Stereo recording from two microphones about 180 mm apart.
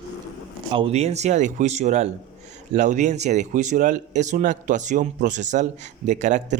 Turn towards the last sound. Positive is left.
turn(degrees=-40)  # may be behind; listen again after turning